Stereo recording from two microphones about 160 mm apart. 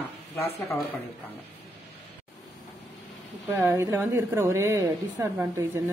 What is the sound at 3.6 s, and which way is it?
A woman's voice, 20° right (ahead or behind).